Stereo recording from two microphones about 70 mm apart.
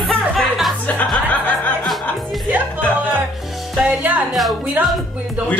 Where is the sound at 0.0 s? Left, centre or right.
Centre.